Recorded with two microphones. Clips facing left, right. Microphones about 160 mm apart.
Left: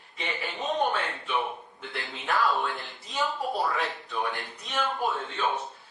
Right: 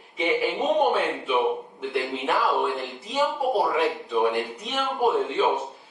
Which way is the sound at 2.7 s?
25° right (ahead or behind).